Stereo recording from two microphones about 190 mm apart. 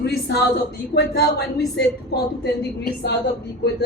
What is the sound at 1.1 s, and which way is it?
Speech, 60° left (ahead or behind).